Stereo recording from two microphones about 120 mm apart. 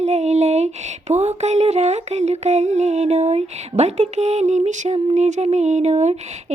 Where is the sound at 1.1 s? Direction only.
65° right (ahead or behind); by 5.4 s 85° right.